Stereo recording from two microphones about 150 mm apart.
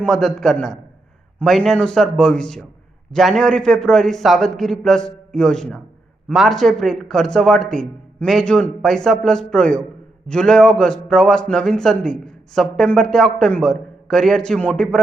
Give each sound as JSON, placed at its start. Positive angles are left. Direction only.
{"t": 0.0, "sound": "a man's voice", "side_deg": 5}